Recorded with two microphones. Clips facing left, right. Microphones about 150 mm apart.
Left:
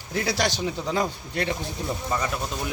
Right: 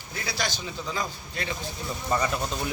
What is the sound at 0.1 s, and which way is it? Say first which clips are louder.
Speech: left 7 dB; 75° left (ahead or behind).